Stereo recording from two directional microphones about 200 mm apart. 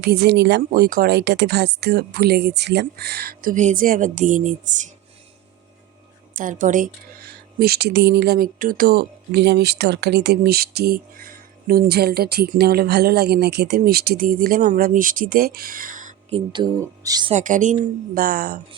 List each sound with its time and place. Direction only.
0.0 s speech: 55° right (ahead or behind)
6.3 s speech: 40° right (ahead or behind)
16.5 s speech: 20° right (ahead or behind)
17.3 s speech: 40° right (ahead or behind)